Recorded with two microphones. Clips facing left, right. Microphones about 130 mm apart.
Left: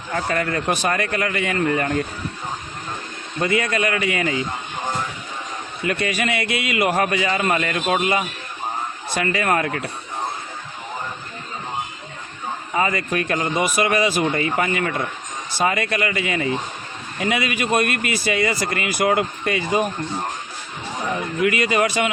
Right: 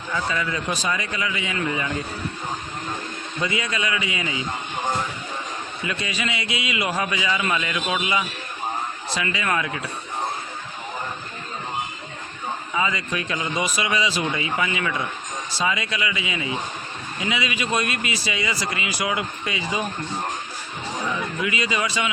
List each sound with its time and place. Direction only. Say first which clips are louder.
0.1 s a man's voice: left 3 dB; 55° left (ahead or behind)
3.4 s speech: left 6 dB; 55° left (ahead or behind)
5.8 s speech: left 6 dB; 55° left (ahead or behind)
12.7 s speech: left 5 dB; 50° left (ahead or behind)
21.1 s a man's voice: left 7 dB; 55° left (ahead or behind)